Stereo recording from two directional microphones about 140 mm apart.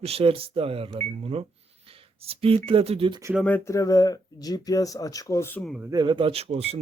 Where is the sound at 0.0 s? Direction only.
45° right (ahead or behind).